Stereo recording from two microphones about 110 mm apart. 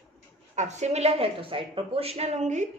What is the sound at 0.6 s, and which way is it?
A woman's voice, 90° right.